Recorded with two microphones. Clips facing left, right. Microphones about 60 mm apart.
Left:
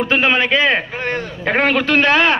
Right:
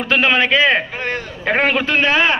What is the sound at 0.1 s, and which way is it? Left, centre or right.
Speech, left.